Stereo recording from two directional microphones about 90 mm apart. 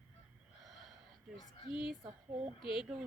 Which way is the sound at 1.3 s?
45° left (ahead or behind).